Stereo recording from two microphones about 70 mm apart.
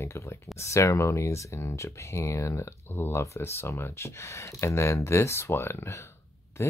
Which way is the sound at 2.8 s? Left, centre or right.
Left.